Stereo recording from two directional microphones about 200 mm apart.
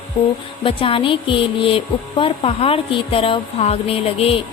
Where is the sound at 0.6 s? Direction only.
25° left (ahead or behind).